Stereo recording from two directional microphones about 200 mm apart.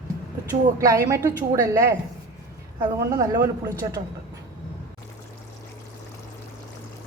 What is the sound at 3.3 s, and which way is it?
Speech, 15° right (ahead or behind).